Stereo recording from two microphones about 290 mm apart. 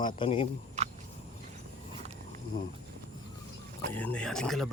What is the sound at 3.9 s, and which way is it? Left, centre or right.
Speech, centre.